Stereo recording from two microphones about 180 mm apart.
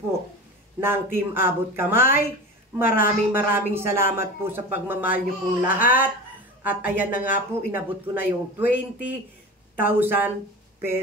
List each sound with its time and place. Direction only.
0.7 s speech: 10° right (ahead or behind)